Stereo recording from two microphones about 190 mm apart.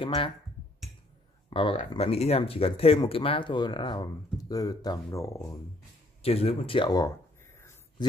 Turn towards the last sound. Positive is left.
turn(degrees=25)  # may be behind; listen again after turning